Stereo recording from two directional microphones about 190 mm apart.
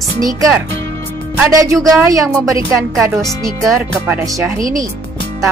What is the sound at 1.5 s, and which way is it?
Speech, 15° right (ahead or behind).